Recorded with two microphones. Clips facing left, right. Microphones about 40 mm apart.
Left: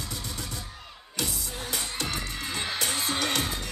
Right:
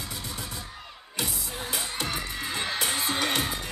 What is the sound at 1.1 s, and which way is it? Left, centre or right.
Music, centre.